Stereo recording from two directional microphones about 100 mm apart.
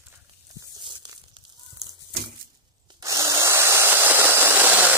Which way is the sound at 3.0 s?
35° right (ahead or behind).